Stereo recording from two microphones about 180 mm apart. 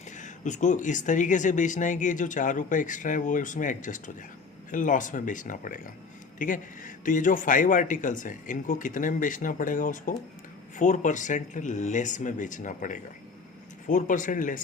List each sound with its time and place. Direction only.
0.2 s speech: 40° left (ahead or behind)